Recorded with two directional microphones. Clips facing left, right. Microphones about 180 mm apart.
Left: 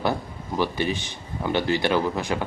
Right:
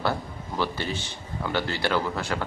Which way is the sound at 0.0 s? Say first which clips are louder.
Left 2 dB; 15° left (ahead or behind).